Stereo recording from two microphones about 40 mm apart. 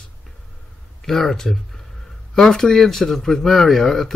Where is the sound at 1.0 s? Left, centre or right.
Centre.